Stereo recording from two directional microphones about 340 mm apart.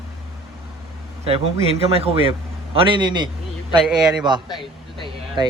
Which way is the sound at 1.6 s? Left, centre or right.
Centre.